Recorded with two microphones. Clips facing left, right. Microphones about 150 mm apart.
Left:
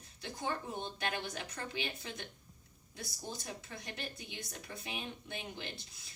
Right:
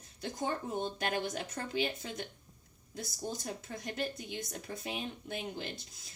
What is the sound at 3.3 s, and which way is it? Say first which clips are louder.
A woman's voice: right 2 dB; 45° right (ahead or behind).